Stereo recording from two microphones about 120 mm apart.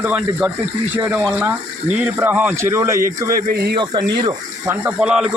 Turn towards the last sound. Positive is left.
turn(degrees=-5)  # may be behind; listen again after turning